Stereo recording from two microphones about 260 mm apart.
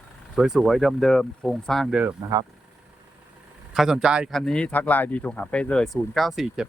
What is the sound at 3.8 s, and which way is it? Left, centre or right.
Speech, centre.